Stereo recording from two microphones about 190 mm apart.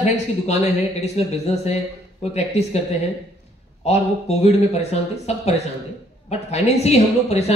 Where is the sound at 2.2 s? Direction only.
35° left (ahead or behind).